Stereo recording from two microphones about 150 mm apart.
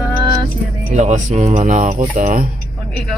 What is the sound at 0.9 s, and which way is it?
Speech, 55° right (ahead or behind).